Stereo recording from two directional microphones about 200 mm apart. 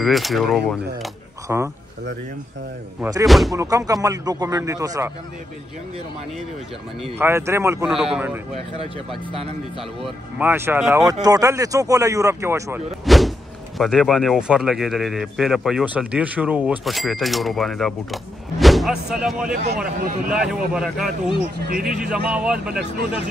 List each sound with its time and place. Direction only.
0.0 s a man's voice: centre (ahead or behind)
3.0 s a man's voice: 15° right (ahead or behind)
3.3 s speech: centre (ahead or behind)
3.5 s a man's voice: 15° right (ahead or behind)
7.2 s a man's voice: 10° right (ahead or behind)
7.8 s speech: 5° right (ahead or behind)
9.3 s speech: 30° right (ahead or behind)
10.0 s a man's voice: 10° right (ahead or behind)
13.0 s speech: centre (ahead or behind)
21.5 s speech: 45° right (ahead or behind)
21.8 s speech: 5° right (ahead or behind)